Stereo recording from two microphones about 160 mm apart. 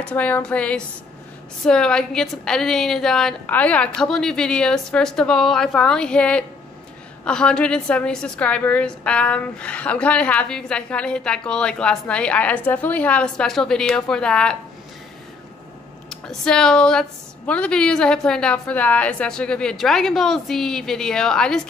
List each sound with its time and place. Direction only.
0.0 s a woman's voice: 10° left (ahead or behind)
16.1 s a woman's voice: 5° left (ahead or behind)